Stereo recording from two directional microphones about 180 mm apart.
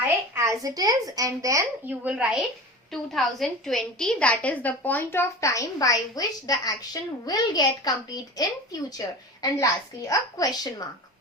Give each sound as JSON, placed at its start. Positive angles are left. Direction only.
{"t": 0.0, "sound": "a woman's voice", "side_deg": -15}